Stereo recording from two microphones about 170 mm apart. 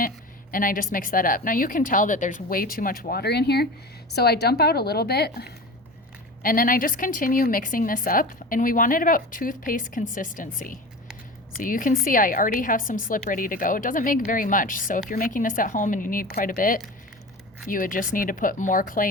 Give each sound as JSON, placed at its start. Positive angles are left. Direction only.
{"t": 0.5, "sound": "a woman's voice", "side_deg": 55}
{"t": 6.4, "sound": "a woman's voice", "side_deg": 55}